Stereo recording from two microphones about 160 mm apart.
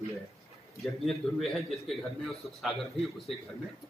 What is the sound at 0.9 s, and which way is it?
Speech, centre (ahead or behind).